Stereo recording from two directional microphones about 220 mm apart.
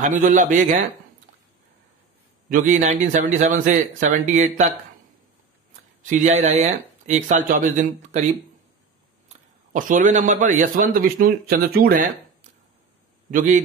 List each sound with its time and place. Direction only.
0.0 s a man's voice: 35° right (ahead or behind)
2.5 s a man's voice: 35° right (ahead or behind)
6.0 s a man's voice: 35° right (ahead or behind)
9.7 s a man's voice: 35° right (ahead or behind)
13.3 s a man's voice: 35° right (ahead or behind)